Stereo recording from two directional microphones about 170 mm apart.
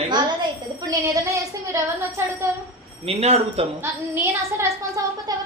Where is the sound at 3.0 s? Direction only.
40° right (ahead or behind).